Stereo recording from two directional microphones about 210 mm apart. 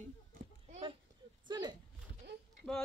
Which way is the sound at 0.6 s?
30° right (ahead or behind).